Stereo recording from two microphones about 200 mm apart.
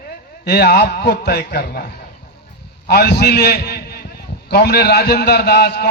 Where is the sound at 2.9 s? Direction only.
55° left (ahead or behind).